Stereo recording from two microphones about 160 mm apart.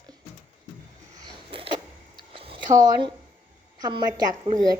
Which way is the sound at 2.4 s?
35° right (ahead or behind).